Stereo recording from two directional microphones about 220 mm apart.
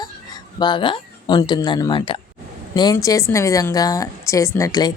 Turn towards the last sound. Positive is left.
turn(degrees=15)  # may be behind; listen again after turning